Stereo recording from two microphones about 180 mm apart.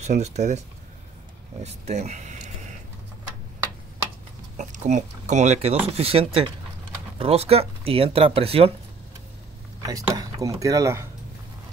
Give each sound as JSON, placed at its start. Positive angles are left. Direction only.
{"t": 0.0, "sound": "speech", "side_deg": -40}
{"t": 4.6, "sound": "speech", "side_deg": -40}
{"t": 10.0, "sound": "speech", "side_deg": -20}